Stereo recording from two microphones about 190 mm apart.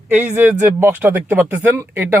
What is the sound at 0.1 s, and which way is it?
Speech, 10° right (ahead or behind).